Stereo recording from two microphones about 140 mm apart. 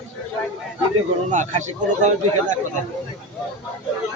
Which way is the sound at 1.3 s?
60° right (ahead or behind).